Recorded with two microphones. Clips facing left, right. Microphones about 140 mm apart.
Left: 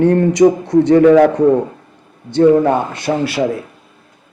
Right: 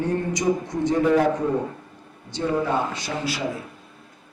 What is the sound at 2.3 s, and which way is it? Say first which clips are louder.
A man's voice: left 13 dB; 60° left (ahead or behind).